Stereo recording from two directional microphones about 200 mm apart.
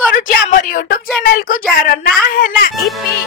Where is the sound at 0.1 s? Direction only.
45° left (ahead or behind).